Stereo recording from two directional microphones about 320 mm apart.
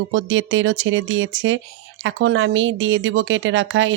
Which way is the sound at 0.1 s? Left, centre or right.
Right.